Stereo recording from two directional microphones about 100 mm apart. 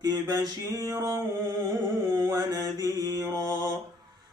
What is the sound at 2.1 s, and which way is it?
Mantra, 35° right (ahead or behind).